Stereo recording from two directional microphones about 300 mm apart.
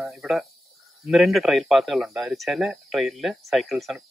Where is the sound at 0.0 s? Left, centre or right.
Centre.